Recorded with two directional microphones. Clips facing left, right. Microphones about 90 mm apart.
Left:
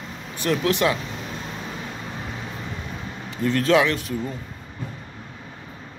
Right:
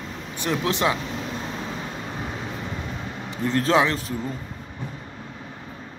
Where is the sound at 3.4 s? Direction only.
30° right (ahead or behind).